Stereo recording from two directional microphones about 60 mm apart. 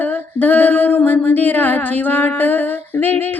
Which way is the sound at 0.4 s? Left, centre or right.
Left.